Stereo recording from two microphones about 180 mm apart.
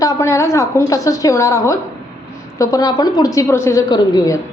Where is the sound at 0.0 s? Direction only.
15° left (ahead or behind).